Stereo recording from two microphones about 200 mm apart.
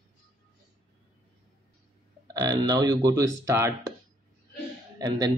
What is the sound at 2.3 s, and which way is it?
Speech, 20° right (ahead or behind).